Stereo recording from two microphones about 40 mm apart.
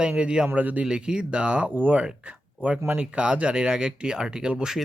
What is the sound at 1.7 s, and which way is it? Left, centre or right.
Speech, right.